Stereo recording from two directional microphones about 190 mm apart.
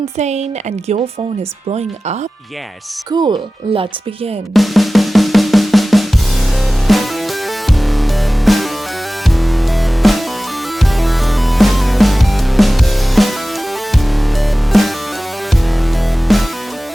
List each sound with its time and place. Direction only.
0.2 s speech: 35° right (ahead or behind)
3.1 s speech: 25° right (ahead or behind)
4.5 s drum: centre (ahead or behind)
6.8 s music: centre (ahead or behind)
14.7 s music: centre (ahead or behind)
16.3 s music: centre (ahead or behind)